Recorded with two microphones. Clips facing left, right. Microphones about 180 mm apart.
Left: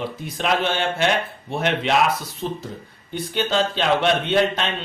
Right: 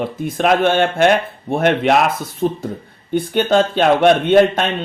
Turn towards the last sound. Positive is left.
turn(degrees=-50)  # may be behind; listen again after turning